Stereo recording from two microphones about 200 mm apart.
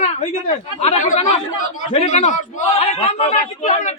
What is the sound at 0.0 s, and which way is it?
A man's voice, 35° left (ahead or behind).